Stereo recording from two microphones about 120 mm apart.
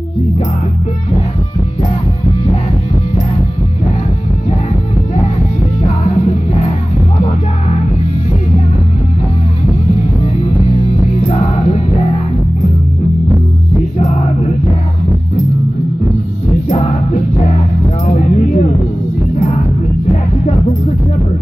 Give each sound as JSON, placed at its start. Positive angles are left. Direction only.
{"t": 11.1, "sound": "music", "side_deg": 65}
{"t": 13.9, "sound": "music", "side_deg": 70}
{"t": 16.6, "sound": "music", "side_deg": 75}